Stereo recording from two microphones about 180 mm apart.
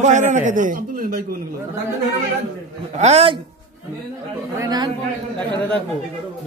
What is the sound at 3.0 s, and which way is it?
Speech, 35° right (ahead or behind).